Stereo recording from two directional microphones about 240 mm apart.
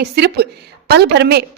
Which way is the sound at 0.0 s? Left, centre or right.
Right.